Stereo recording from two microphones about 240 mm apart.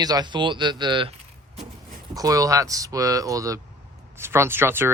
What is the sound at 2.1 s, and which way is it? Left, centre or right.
Speech, centre.